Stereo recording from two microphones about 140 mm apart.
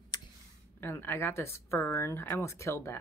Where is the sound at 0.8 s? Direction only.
15° left (ahead or behind).